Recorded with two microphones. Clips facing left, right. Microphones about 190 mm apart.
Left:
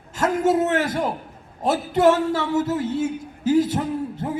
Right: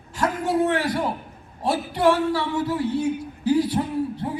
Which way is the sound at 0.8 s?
25° left (ahead or behind).